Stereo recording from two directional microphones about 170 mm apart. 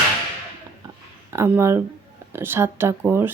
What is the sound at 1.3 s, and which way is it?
A woman's voice, 15° right (ahead or behind).